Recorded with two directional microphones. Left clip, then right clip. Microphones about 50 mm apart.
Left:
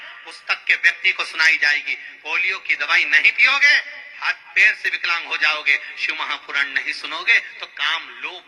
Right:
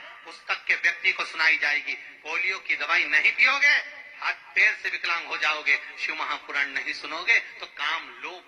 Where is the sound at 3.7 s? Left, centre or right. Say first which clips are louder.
Left 6 dB; left.